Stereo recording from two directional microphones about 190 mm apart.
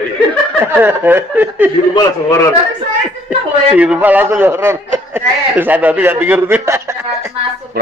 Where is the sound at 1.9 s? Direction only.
20° left (ahead or behind).